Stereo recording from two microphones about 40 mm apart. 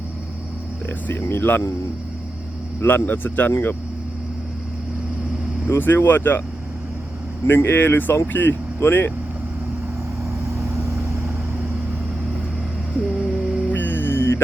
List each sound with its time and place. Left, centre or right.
1.0 s speech: left
2.8 s speech: left
5.6 s speech: left
7.4 s speech: left
13.0 s a sound: centre
13.7 s music: left